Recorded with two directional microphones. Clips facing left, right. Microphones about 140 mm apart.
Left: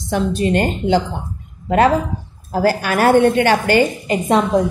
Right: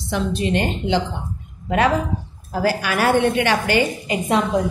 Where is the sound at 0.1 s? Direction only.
45° left (ahead or behind).